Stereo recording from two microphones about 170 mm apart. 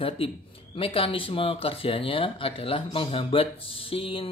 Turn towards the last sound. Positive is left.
turn(degrees=30)  # may be behind; listen again after turning